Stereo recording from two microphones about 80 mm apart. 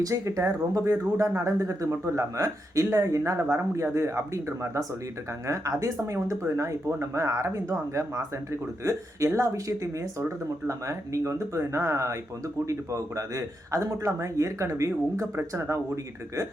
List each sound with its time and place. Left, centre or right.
0.0 s a man's voice: right